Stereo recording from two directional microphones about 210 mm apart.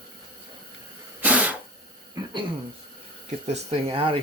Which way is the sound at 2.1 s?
20° right (ahead or behind).